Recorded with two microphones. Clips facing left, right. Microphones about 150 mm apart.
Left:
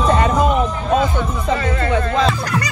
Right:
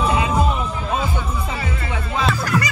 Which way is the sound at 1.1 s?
10° right (ahead or behind).